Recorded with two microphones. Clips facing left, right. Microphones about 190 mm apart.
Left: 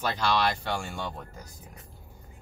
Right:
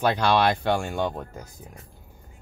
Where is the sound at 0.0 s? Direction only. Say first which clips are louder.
Right 6 dB; 60° right (ahead or behind).